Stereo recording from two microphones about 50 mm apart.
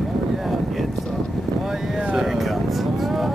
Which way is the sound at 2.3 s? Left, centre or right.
Centre.